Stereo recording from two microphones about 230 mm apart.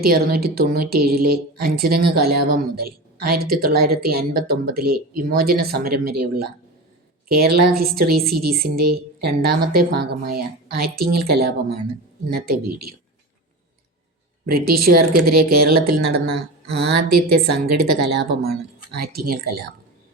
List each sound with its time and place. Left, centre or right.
0.0 s a woman's voice: right
14.4 s a woman's voice: right